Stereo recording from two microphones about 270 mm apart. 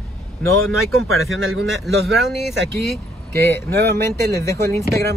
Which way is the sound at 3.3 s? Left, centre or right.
Centre.